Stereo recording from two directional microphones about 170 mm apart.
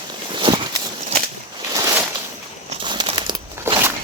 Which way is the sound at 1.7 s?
15° right (ahead or behind).